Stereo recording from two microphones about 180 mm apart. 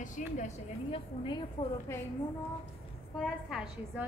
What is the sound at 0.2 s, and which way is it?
Speech, 45° left (ahead or behind).